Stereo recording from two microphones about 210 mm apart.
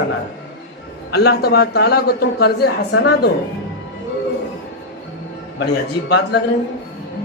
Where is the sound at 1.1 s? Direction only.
50° left (ahead or behind).